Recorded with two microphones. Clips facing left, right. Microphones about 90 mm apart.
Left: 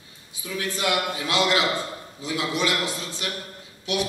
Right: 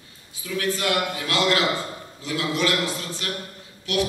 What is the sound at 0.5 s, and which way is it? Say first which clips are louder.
A man's voice: right 2 dB; 20° left (ahead or behind).